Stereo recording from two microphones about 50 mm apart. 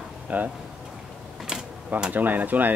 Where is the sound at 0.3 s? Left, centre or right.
Right.